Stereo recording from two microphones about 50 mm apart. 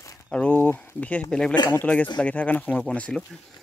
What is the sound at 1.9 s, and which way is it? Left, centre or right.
Speech, left.